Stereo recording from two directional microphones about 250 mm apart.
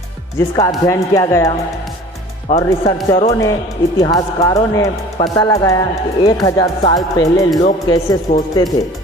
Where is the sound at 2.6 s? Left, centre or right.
Centre.